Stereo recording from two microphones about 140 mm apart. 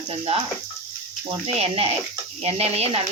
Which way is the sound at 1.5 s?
45° right (ahead or behind).